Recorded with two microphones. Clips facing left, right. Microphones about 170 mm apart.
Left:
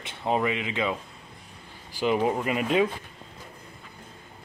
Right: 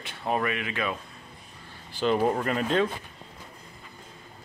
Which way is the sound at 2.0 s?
10° left (ahead or behind).